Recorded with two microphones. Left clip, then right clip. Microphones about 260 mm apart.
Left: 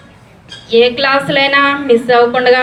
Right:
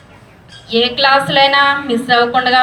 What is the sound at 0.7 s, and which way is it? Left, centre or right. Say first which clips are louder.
A woman's voice: left 2 dB; centre.